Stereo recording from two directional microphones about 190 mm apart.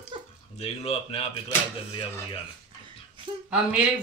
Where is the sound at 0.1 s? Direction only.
25° right (ahead or behind).